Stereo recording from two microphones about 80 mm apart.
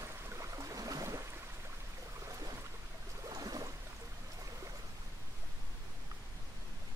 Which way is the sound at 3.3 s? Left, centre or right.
Right.